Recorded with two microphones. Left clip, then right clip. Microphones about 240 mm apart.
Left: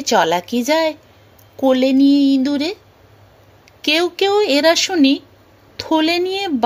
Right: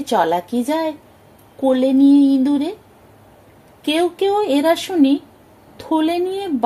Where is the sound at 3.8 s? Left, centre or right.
Left.